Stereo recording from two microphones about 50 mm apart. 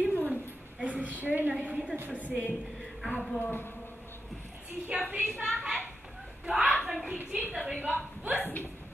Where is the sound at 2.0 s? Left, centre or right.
Right.